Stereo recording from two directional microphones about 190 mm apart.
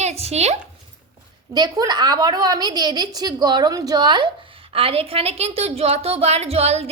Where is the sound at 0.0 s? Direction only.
35° right (ahead or behind).